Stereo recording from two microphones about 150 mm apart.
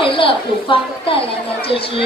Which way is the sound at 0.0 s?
35° left (ahead or behind).